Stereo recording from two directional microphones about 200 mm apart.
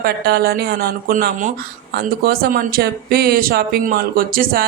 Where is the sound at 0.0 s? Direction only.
50° right (ahead or behind).